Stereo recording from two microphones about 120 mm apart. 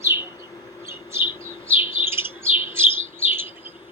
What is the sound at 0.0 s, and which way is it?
Bird, 20° right (ahead or behind).